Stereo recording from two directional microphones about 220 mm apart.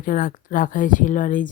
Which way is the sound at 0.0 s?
40° left (ahead or behind).